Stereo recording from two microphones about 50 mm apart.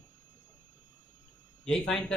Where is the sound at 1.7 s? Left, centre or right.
Centre.